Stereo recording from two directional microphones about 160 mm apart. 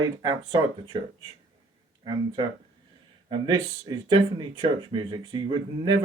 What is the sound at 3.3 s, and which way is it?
Speech, 30° right (ahead or behind).